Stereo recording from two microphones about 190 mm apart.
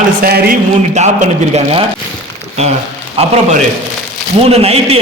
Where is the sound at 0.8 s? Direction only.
35° right (ahead or behind).